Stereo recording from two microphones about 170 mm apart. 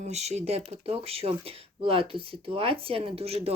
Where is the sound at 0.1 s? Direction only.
40° right (ahead or behind).